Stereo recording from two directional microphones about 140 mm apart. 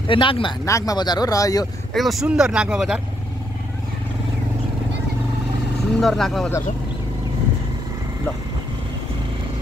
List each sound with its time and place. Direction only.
0.0 s speech: 35° left (ahead or behind)
0.7 s speech: 25° left (ahead or behind)
2.0 s speech: centre (ahead or behind)
5.9 s speech: 5° left (ahead or behind)